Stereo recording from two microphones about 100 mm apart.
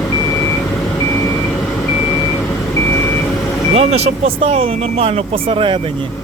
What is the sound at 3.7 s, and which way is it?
Vehicle, 90° right.